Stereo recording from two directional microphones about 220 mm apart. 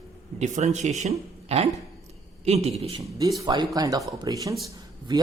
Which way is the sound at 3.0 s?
15° right (ahead or behind).